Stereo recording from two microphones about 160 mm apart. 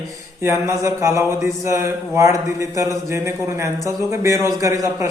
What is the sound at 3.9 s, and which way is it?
Speech, 20° right (ahead or behind).